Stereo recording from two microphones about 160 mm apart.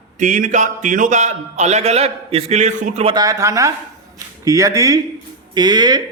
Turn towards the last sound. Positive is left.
turn(degrees=-25)  # may be behind; listen again after turning